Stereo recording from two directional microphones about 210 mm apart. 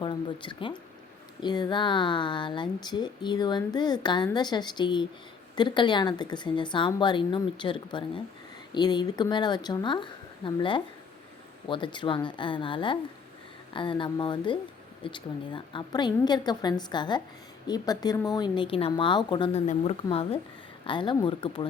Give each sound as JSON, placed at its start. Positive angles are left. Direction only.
{"t": 0.0, "sound": "speech", "side_deg": 20}